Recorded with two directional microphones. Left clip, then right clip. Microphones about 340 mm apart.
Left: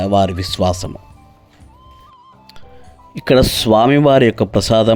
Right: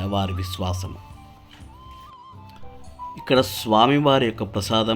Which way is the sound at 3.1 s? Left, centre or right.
Left.